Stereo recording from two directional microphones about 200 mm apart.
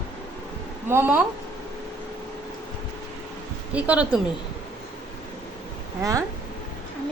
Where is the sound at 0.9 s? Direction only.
10° right (ahead or behind).